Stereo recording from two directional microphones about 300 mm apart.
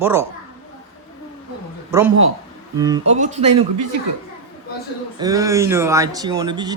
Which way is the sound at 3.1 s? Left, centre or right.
Right.